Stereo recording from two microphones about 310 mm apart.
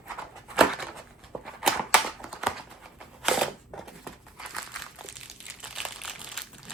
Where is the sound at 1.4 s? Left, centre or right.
Centre.